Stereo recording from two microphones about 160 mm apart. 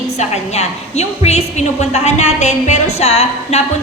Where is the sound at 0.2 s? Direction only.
45° left (ahead or behind).